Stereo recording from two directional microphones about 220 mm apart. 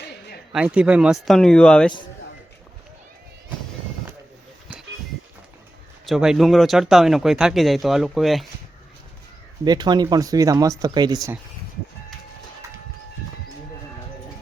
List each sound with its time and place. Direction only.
0.5 s speech: 5° right (ahead or behind)
6.1 s speech: centre (ahead or behind)
9.6 s speech: 20° right (ahead or behind)